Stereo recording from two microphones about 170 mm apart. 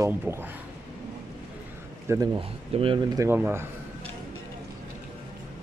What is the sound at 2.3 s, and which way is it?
Speech, 30° right (ahead or behind).